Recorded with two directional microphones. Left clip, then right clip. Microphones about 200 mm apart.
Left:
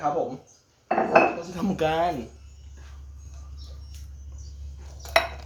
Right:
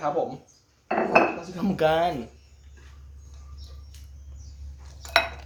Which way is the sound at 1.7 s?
25° right (ahead or behind).